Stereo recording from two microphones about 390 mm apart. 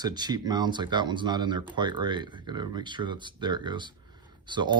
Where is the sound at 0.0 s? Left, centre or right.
Centre.